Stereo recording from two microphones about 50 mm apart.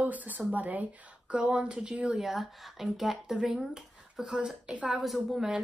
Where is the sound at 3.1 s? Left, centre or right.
Centre.